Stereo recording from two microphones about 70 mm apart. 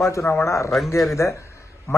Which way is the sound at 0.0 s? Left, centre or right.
Left.